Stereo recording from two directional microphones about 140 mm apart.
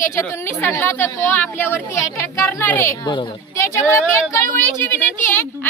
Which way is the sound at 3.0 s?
35° left (ahead or behind).